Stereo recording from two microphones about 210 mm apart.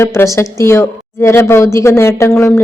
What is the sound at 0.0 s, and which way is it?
A woman's voice, 10° left (ahead or behind).